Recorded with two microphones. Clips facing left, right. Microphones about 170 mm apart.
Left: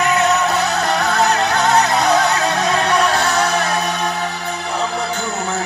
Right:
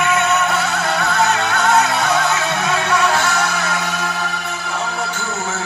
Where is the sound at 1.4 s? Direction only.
35° left (ahead or behind).